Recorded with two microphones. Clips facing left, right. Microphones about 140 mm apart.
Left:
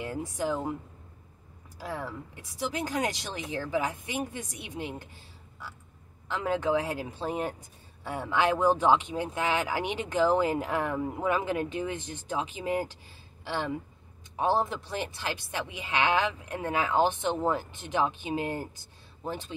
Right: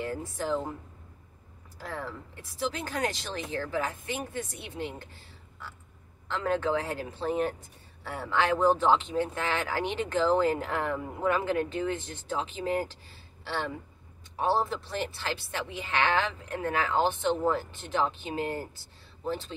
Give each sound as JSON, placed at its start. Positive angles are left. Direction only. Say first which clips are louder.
{"t": 0.0, "sound": "speech", "louder": "left 1 dB", "side_deg": 15}
{"t": 1.8, "sound": "speech", "louder": "left 1 dB", "side_deg": 10}
{"t": 13.4, "sound": "a sound", "louder": "left 1 dB", "side_deg": 15}
{"t": 14.3, "sound": "speech", "louder": "even", "side_deg": 20}